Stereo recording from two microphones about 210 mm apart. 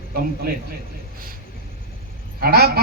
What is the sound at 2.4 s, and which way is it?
Speech, 45° right (ahead or behind).